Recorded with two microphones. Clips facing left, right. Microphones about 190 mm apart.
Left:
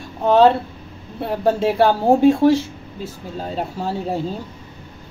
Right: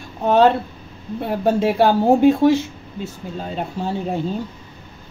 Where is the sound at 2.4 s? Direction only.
30° left (ahead or behind).